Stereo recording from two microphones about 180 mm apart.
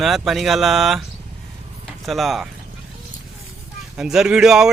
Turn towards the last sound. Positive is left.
turn(degrees=0)  # may be behind; listen again after turning